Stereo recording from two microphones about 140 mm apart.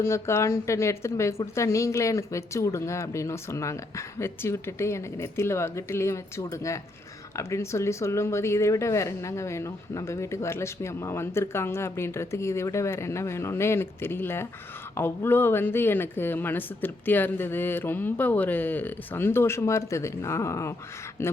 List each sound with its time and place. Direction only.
0.0 s speech: 20° left (ahead or behind)